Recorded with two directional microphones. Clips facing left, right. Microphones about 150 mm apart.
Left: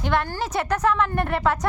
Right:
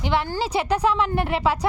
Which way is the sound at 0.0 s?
15° right (ahead or behind).